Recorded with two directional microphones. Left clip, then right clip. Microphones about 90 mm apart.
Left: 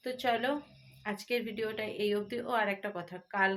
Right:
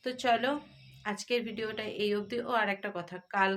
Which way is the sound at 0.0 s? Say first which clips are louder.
Right 3 dB; 35° right (ahead or behind).